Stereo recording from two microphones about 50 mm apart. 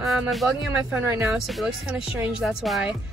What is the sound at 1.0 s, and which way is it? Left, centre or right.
Speech, right.